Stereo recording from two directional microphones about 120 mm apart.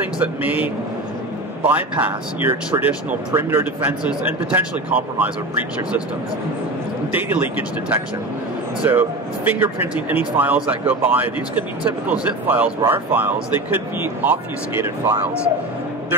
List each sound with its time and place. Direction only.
0.2 s a man's voice: 15° right (ahead or behind)
7.2 s a man's voice: 15° right (ahead or behind)